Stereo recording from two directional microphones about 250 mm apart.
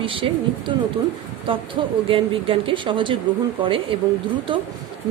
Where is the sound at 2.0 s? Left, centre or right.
Right.